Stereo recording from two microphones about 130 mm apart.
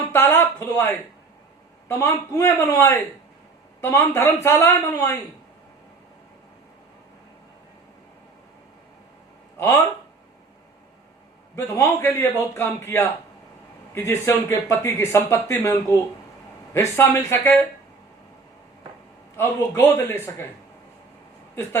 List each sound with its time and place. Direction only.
0.1 s a man's voice: 15° left (ahead or behind)
9.6 s speech: 20° left (ahead or behind)
11.5 s speech: 20° left (ahead or behind)
19.4 s a man's voice: 20° left (ahead or behind)
21.5 s speech: 20° left (ahead or behind)